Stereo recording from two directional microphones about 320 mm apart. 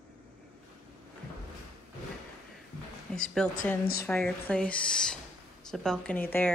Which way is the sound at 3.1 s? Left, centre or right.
Centre.